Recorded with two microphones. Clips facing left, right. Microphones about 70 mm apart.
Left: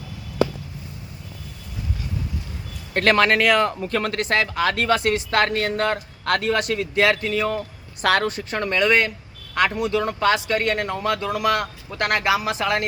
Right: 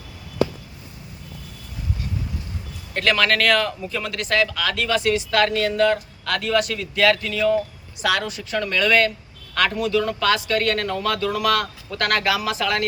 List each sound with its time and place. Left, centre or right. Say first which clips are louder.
2.9 s speech: left 3 dB; left
3.2 s speech: left 1 dB; centre
3.8 s speech: left 4 dB; left
8.0 s speech: left 3 dB; left